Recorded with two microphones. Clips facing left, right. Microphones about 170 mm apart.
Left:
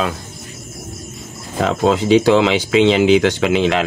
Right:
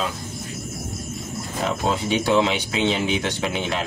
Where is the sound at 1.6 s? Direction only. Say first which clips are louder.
Left 8 dB; 90° left.